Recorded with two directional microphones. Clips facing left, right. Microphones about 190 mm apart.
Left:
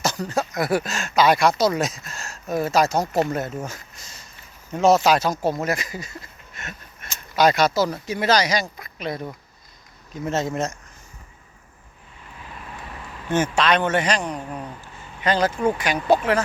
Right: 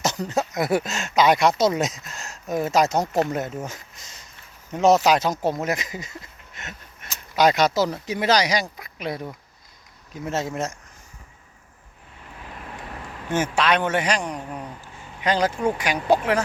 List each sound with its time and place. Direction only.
0.0 s speech: 20° right (ahead or behind)
3.1 s speech: centre (ahead or behind)
3.3 s a man's voice: 15° right (ahead or behind)
13.3 s a man's voice: 10° right (ahead or behind)